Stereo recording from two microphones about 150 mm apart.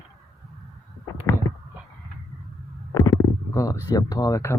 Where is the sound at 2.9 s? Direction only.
20° left (ahead or behind).